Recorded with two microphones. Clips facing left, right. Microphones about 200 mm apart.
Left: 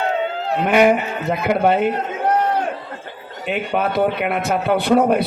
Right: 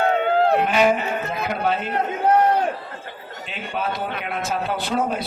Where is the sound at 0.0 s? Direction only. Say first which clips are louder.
Right 4 dB; 60° right (ahead or behind).